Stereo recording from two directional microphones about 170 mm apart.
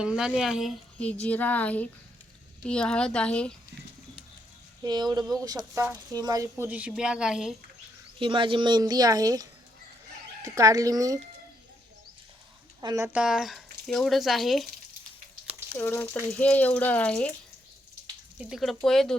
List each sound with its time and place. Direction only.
0.0 s speech: 5° right (ahead or behind)
4.8 s speech: 25° right (ahead or behind)
6.7 s speech: 10° right (ahead or behind)
8.2 s speech: 30° right (ahead or behind)
12.8 s speech: 20° right (ahead or behind)
13.1 s speech: 5° right (ahead or behind)
15.8 s speech: 10° left (ahead or behind)
18.3 s speech: 5° right (ahead or behind)